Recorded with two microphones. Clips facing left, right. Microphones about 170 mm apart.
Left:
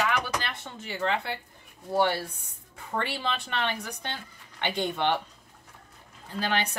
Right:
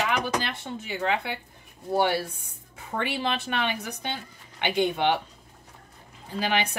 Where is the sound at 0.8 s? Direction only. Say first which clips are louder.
Right 1 dB; 10° right (ahead or behind).